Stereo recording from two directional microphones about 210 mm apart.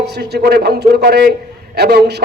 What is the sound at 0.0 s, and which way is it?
A man's voice, 50° right (ahead or behind).